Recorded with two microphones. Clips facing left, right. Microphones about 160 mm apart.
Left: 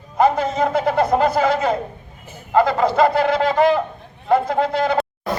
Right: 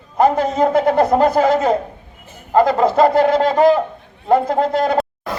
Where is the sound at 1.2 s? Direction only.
40° right (ahead or behind).